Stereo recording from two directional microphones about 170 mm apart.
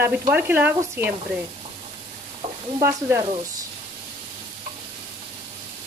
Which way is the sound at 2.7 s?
15° right (ahead or behind).